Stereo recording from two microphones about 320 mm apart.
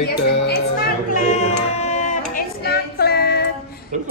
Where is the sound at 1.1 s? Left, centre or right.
Left.